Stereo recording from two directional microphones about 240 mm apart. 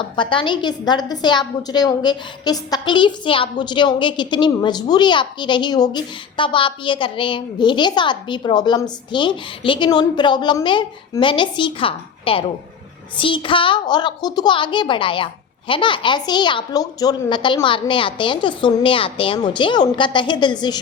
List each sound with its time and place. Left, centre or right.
0.2 s a woman's voice: centre